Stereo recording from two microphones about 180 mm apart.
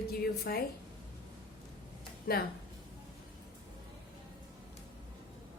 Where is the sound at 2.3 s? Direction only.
60° left (ahead or behind).